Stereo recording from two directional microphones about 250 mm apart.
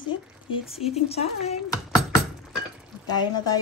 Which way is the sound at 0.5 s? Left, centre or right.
Left.